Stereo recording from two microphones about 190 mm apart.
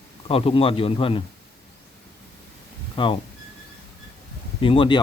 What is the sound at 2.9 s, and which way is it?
Speech, 25° left (ahead or behind).